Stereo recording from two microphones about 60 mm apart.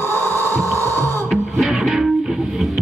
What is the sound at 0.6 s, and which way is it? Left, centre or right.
Music, left.